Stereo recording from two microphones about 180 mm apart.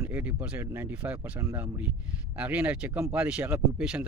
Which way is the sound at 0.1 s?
10° right (ahead or behind).